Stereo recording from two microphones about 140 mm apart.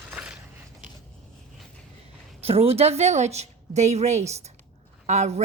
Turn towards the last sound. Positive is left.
turn(degrees=-55)  # may be behind; listen again after turning